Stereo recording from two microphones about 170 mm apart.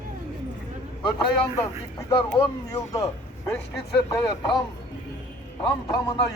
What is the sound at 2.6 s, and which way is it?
Speech, 20° left (ahead or behind).